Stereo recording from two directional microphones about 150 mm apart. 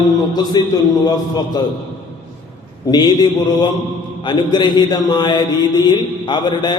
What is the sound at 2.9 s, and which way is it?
A man's voice, 30° left (ahead or behind).